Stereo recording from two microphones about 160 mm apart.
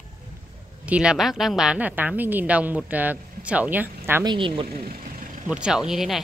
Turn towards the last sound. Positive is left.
turn(degrees=0)  # may be behind; listen again after turning